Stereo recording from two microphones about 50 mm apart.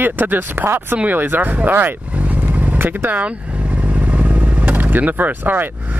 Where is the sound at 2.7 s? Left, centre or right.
Right.